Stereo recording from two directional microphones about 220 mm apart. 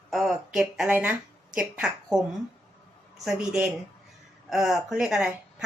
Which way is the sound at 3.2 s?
5° right (ahead or behind).